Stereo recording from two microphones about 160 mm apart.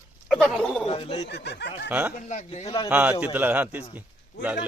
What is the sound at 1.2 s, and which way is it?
Speech, 90° left.